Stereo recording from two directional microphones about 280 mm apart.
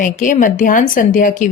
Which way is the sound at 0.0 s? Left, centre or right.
Left.